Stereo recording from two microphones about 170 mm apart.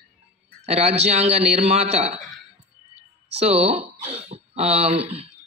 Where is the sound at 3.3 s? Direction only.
35° right (ahead or behind).